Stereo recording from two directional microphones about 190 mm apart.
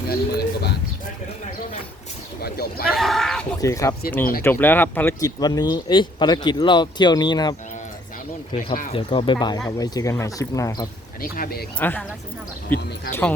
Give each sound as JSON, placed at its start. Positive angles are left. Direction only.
{"t": 0.1, "sound": "speech", "side_deg": 55}
{"t": 2.4, "sound": "speech", "side_deg": 55}
{"t": 2.9, "sound": "a sound", "side_deg": 0}
{"t": 3.6, "sound": "speech", "side_deg": 15}
{"t": 8.5, "sound": "speech", "side_deg": 45}
{"t": 8.9, "sound": "speech", "side_deg": 30}
{"t": 11.2, "sound": "speech", "side_deg": 50}
{"t": 11.8, "sound": "speech", "side_deg": 10}